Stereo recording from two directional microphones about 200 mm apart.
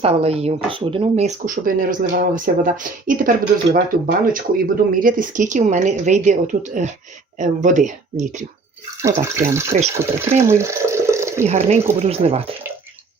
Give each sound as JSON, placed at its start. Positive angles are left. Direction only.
{"t": 0.0, "sound": "speech", "side_deg": -30}
{"t": 9.0, "sound": "speech", "side_deg": -15}
{"t": 11.4, "sound": "speech", "side_deg": -35}